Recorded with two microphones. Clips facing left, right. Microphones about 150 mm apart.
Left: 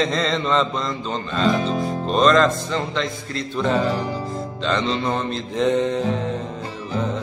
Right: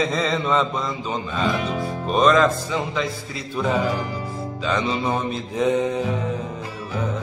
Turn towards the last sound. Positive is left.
turn(degrees=-5)  # may be behind; listen again after turning